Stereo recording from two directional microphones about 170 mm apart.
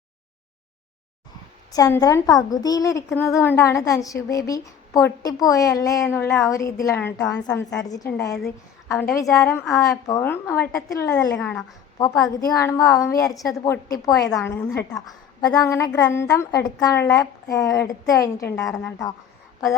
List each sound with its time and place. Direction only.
1.7 s a woman's voice: 20° left (ahead or behind)
18.5 s a woman's voice: 5° left (ahead or behind)